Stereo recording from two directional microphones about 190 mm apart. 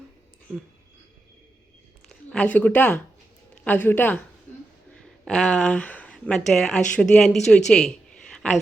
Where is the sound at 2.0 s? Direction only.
5° left (ahead or behind).